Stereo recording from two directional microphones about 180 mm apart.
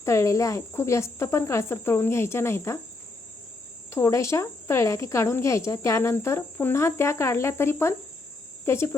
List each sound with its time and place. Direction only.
0.0 s speech: 15° left (ahead or behind)
3.8 s speech: 15° left (ahead or behind)